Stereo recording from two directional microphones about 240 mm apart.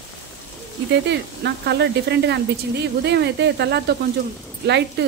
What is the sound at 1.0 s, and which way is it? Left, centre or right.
Speech, right.